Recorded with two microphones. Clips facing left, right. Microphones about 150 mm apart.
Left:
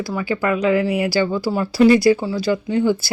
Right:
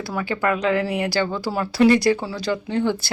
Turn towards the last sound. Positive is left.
turn(degrees=5)  # may be behind; listen again after turning